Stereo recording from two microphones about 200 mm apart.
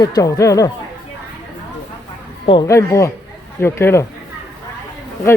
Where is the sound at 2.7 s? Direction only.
15° left (ahead or behind).